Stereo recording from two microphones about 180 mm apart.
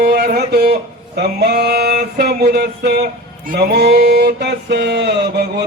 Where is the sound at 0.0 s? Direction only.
60° right (ahead or behind).